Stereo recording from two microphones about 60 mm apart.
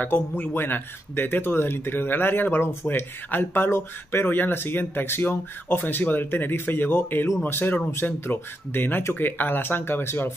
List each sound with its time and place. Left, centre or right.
0.0 s a man's voice: left